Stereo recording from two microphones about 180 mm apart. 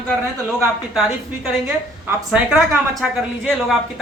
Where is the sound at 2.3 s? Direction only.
Centre (ahead or behind).